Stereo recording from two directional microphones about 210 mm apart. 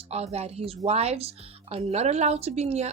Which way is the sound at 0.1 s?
30° right (ahead or behind).